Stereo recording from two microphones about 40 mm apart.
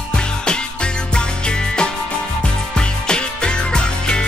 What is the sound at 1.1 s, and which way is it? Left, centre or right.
Music, left.